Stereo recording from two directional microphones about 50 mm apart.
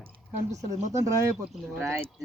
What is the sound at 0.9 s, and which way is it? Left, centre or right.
Speech, right.